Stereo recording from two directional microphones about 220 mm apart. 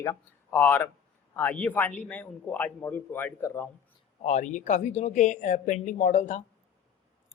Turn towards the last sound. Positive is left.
turn(degrees=35)  # may be behind; listen again after turning